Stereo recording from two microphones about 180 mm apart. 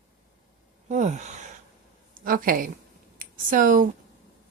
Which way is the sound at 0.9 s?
40° right (ahead or behind).